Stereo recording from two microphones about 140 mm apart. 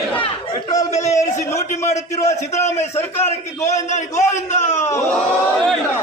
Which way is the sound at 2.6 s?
55° left (ahead or behind).